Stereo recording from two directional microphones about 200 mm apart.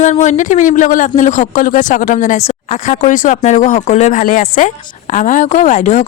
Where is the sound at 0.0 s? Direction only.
35° left (ahead or behind).